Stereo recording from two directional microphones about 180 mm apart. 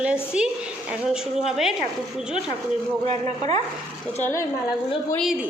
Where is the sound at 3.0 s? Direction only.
35° right (ahead or behind).